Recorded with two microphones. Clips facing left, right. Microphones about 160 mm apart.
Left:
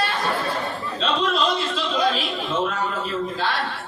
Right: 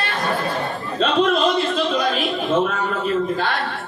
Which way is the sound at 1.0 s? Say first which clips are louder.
Right 5 dB; 55° right (ahead or behind).